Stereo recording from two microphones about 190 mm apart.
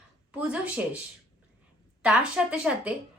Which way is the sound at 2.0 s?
5° right (ahead or behind).